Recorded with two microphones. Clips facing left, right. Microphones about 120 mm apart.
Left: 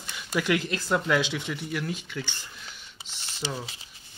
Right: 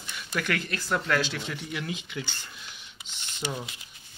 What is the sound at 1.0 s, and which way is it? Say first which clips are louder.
Speech: left 2 dB; 10° left (ahead or behind).